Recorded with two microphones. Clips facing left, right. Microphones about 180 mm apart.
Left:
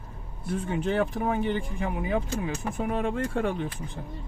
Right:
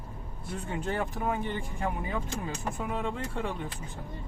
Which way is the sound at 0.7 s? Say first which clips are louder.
Left 5 dB; 80° left.